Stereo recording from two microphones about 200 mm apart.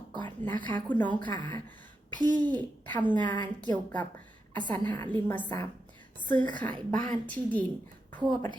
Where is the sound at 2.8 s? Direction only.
10° left (ahead or behind).